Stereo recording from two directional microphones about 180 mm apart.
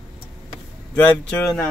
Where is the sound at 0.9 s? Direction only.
5° left (ahead or behind).